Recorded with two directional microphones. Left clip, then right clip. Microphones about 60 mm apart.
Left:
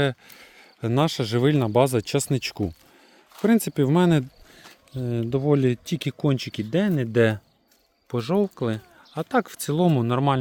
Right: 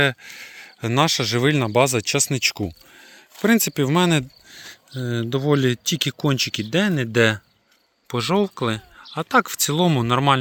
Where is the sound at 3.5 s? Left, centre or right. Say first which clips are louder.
Right 3 dB; left.